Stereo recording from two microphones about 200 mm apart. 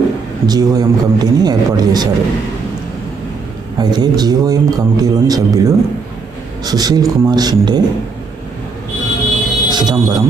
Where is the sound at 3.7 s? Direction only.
20° right (ahead or behind).